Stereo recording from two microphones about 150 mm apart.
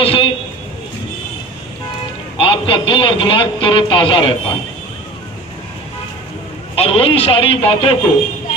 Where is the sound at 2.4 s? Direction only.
35° left (ahead or behind).